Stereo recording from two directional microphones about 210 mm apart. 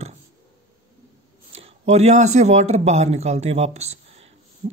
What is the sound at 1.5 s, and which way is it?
Speech, 30° right (ahead or behind).